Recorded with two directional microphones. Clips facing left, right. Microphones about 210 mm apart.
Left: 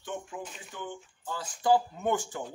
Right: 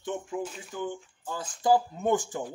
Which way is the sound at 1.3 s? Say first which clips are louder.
Right 1 dB; 15° right (ahead or behind).